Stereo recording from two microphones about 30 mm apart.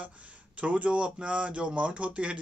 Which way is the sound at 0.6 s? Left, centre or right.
Right.